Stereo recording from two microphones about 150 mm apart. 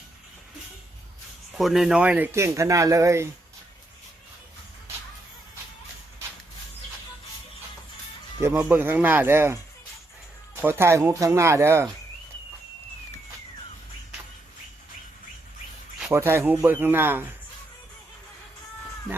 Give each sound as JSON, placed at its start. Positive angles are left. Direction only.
{"t": 1.5, "sound": "speech", "side_deg": 0}
{"t": 8.4, "sound": "speech", "side_deg": -15}
{"t": 16.0, "sound": "speech", "side_deg": -15}